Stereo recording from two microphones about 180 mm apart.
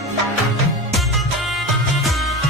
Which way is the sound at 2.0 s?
Centre (ahead or behind).